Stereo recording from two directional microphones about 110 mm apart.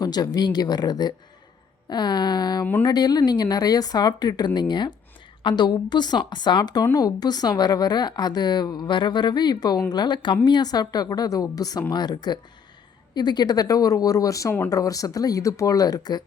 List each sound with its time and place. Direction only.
0.0 s a woman's voice: 35° left (ahead or behind)